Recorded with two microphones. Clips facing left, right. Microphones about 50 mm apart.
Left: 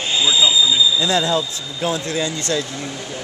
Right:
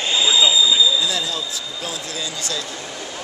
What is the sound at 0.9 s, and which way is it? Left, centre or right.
Speech, left.